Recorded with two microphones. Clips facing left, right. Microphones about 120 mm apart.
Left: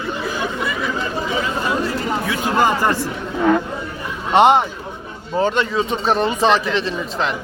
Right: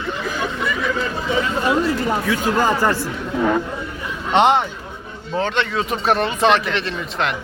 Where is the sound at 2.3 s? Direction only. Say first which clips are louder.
Left 2 dB; 20° left (ahead or behind).